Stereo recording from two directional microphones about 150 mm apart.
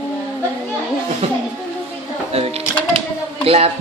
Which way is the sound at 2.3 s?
40° right (ahead or behind).